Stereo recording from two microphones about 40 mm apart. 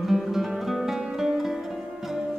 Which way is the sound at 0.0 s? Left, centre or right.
Centre.